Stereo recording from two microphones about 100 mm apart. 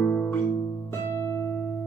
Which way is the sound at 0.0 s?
15° left (ahead or behind).